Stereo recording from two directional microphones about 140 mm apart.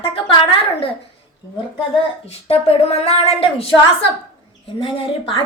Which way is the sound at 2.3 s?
45° left (ahead or behind).